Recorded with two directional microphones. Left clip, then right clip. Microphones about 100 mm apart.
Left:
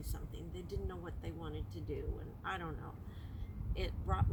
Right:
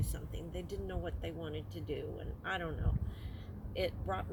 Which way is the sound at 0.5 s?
20° left (ahead or behind).